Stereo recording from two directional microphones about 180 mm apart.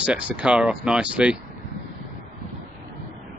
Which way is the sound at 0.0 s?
5° right (ahead or behind).